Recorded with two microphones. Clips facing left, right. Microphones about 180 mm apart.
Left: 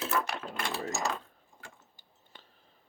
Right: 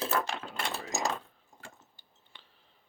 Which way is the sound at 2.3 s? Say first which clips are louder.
Left 3 dB; 45° left (ahead or behind).